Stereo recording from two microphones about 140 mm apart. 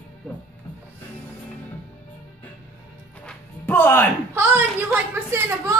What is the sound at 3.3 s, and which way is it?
Music, 15° left (ahead or behind).